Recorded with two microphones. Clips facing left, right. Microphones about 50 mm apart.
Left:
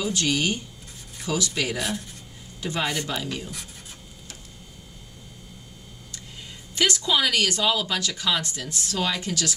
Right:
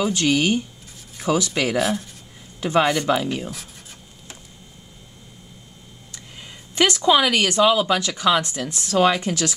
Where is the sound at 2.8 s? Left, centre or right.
Right.